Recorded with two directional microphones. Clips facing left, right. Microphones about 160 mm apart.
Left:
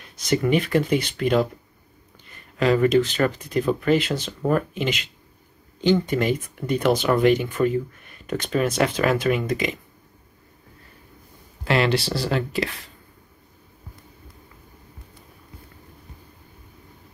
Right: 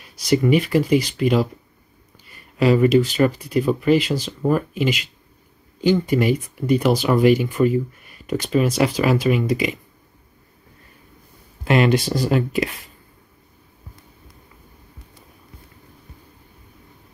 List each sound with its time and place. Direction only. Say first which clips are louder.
0.0 s speech: right 4 dB; 5° right (ahead or behind)
2.6 s speech: right 3 dB; 10° right (ahead or behind)
11.6 s speech: right 4 dB; 15° right (ahead or behind)